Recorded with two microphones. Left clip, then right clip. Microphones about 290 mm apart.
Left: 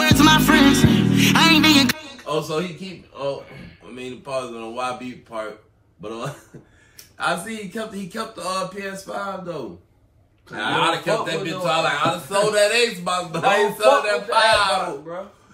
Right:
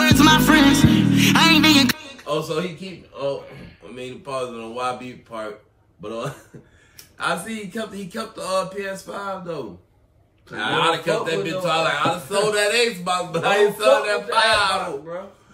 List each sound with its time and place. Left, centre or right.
0.0 s music: centre
3.9 s a man's voice: centre